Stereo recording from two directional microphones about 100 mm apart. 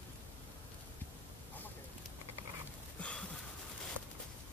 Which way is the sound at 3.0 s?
10° left (ahead or behind).